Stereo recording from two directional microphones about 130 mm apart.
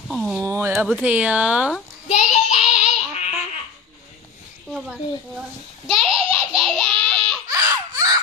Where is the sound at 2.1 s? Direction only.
60° left (ahead or behind).